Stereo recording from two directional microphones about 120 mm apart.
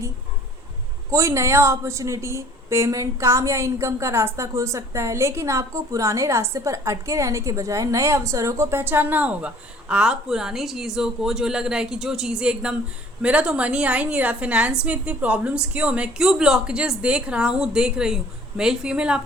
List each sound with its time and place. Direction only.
1.1 s a woman's voice: 25° right (ahead or behind); by 19.2 s 10° right (ahead or behind)